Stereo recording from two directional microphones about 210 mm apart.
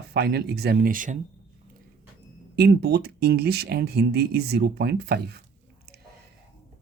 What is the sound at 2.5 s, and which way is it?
Speech, 50° right (ahead or behind).